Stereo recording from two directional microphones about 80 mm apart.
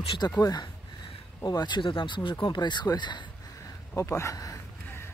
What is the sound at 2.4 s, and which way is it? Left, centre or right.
Speech, left.